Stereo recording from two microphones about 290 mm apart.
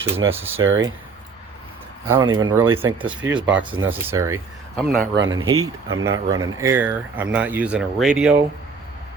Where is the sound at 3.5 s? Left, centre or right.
Right.